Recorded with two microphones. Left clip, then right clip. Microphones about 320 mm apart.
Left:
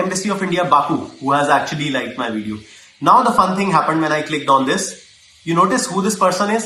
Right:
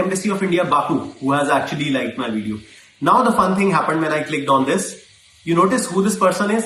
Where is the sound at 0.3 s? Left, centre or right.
Centre.